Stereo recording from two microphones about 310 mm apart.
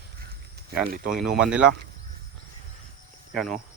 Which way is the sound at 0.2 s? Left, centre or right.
Right.